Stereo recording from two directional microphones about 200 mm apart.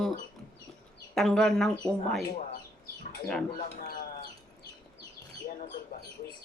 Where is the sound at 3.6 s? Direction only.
45° left (ahead or behind).